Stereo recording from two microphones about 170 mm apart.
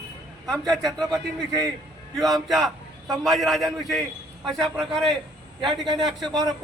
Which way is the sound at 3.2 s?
Centre (ahead or behind).